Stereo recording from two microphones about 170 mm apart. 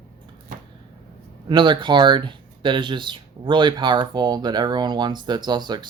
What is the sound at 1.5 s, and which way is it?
Speech, 30° right (ahead or behind).